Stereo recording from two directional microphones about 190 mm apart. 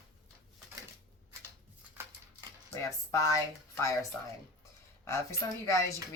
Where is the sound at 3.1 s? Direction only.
15° left (ahead or behind).